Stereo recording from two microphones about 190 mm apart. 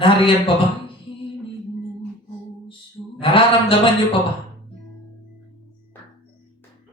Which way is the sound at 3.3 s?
30° left (ahead or behind).